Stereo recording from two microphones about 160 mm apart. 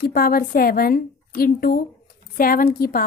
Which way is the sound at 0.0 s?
65° left (ahead or behind).